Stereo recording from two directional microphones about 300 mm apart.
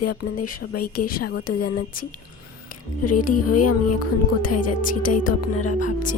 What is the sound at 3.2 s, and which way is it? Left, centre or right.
Speech, left.